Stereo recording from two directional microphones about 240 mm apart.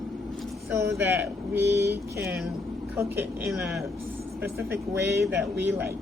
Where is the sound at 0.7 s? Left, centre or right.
Centre.